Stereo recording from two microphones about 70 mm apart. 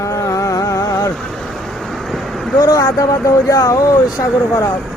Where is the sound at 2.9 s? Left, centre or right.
Left.